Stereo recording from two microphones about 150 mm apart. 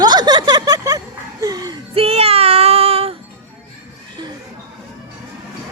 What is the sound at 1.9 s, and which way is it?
Child singing, 40° right (ahead or behind).